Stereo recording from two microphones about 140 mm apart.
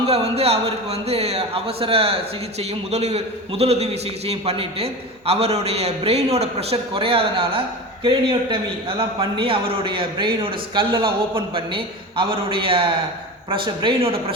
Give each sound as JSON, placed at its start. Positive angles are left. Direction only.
{"t": 0.0, "sound": "a man's voice", "side_deg": -45}